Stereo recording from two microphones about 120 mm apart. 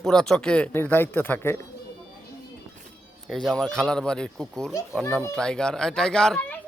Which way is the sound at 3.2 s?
5° left (ahead or behind).